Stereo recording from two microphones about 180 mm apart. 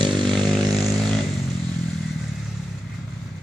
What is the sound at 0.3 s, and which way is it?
Vehicle, centre (ahead or behind).